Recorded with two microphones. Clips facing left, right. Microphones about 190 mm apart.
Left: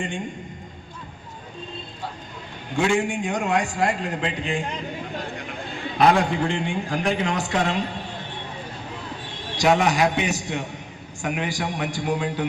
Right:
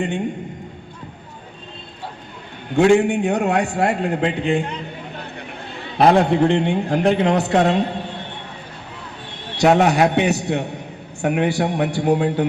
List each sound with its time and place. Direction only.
0.0 s a man's voice: 60° right (ahead or behind)
3.0 s a man's voice: 60° right (ahead or behind)
5.2 s a sound: 60° right (ahead or behind)
6.0 s a man's voice: 40° right (ahead or behind)
6.2 s a man's voice: 60° right (ahead or behind)
7.6 s a man's voice: 35° right (ahead or behind)
9.6 s a man's voice: 60° right (ahead or behind)